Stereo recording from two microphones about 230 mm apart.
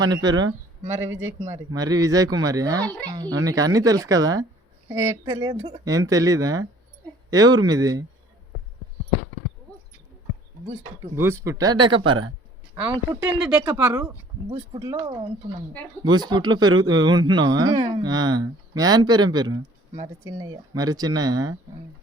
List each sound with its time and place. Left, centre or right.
0.0 s speech: centre
1.1 s a man's voice: right
1.7 s speech: centre
2.8 s speech: centre
3.1 s speech: centre
11.0 s speech: centre